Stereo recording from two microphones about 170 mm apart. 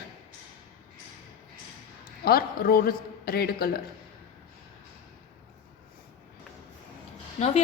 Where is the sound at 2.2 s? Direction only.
60° left (ahead or behind).